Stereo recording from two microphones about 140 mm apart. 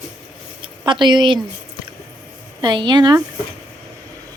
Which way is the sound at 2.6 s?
30° right (ahead or behind).